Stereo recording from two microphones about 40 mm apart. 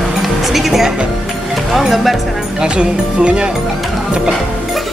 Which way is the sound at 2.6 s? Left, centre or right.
Right.